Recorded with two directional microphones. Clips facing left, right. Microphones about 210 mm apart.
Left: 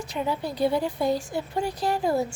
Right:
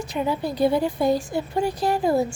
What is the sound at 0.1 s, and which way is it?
A woman's voice, 15° right (ahead or behind).